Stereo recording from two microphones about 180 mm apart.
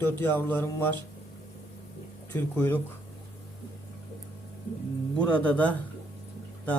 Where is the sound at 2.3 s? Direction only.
10° left (ahead or behind).